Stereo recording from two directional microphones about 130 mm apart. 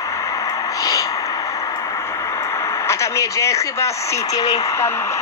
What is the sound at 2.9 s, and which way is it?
Speech, 25° left (ahead or behind).